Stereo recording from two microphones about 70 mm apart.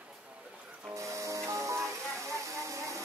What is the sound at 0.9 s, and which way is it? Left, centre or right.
Music, right.